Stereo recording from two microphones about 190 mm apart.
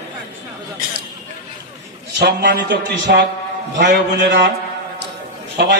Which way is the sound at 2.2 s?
55° right (ahead or behind).